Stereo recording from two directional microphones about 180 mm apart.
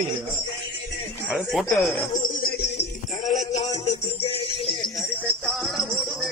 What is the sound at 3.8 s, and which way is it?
Music, 35° left (ahead or behind).